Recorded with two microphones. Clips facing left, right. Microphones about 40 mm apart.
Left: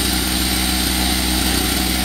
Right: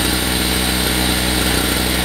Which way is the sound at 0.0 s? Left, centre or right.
Right.